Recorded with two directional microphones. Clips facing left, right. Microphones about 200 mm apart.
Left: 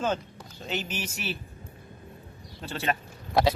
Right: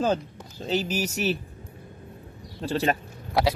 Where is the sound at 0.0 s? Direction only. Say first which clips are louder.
Right 4 dB; 35° right (ahead or behind).